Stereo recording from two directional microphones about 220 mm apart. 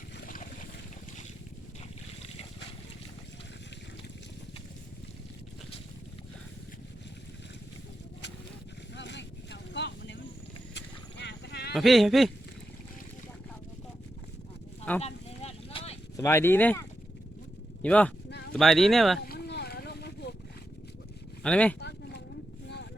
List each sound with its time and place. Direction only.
9.0 s vehicle: 50° left (ahead or behind)
11.7 s speech: centre (ahead or behind)
15.0 s vehicle: 30° left (ahead or behind)
16.1 s speech: 10° left (ahead or behind)
17.8 s speech: 5° left (ahead or behind)
18.3 s a sound: 50° left (ahead or behind)
18.5 s speech: centre (ahead or behind)
19.2 s a sound: 45° left (ahead or behind)
21.4 s speech: 5° left (ahead or behind)
21.8 s a sound: 50° left (ahead or behind)